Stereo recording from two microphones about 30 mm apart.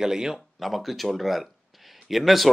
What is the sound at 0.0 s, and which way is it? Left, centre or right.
Speech, centre.